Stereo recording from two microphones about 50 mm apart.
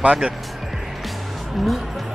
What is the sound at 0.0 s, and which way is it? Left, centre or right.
Speech, right.